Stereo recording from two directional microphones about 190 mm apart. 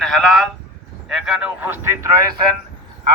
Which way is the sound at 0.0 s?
Centre (ahead or behind).